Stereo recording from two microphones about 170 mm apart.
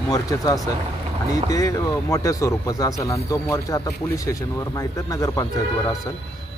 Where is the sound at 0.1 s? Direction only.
20° left (ahead or behind).